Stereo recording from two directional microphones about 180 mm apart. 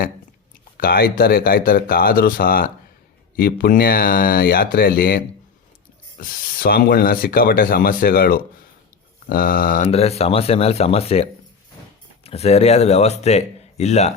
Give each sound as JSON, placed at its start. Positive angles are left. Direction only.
{"t": 0.8, "sound": "speech", "side_deg": 55}
{"t": 9.9, "sound": "speech", "side_deg": 35}